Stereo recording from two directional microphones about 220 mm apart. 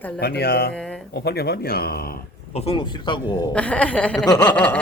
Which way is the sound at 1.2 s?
45° left (ahead or behind).